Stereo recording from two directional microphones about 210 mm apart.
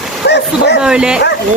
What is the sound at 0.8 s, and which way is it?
Speech, 5° right (ahead or behind).